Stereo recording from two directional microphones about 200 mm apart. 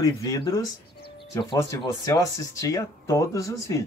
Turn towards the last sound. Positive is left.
turn(degrees=15)  # may be behind; listen again after turning